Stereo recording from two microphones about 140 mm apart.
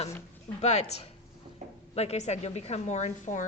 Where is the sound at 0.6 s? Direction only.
50° left (ahead or behind).